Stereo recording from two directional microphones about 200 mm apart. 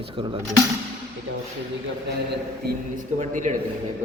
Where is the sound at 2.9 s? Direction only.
40° right (ahead or behind).